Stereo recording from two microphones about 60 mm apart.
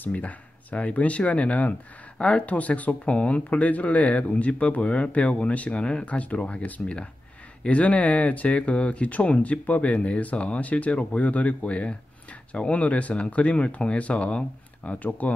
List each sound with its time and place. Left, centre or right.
0.0 s speech: left